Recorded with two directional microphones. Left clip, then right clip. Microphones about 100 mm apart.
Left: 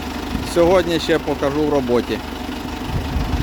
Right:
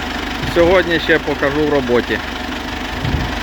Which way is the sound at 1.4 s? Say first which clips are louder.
Right 3 dB; 5° left (ahead or behind).